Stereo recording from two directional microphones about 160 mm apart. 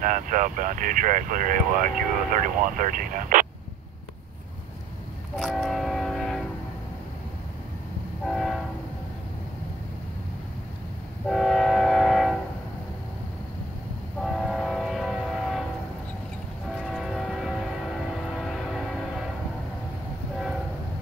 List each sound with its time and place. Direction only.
0.0 s speech: 55° right (ahead or behind)
5.4 s train: centre (ahead or behind)
8.3 s train: centre (ahead or behind)
11.2 s train: centre (ahead or behind)
14.2 s train: centre (ahead or behind)
16.8 s train: centre (ahead or behind)